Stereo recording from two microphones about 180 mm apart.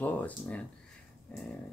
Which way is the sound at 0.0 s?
10° left (ahead or behind).